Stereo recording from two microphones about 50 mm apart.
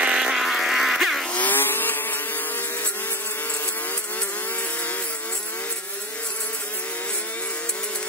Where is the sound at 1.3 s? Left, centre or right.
Left.